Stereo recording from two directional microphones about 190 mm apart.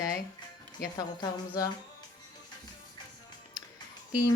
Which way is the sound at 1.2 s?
20° left (ahead or behind).